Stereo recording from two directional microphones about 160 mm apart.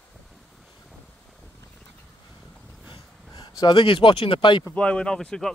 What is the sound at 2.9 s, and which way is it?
Speech, 25° left (ahead or behind).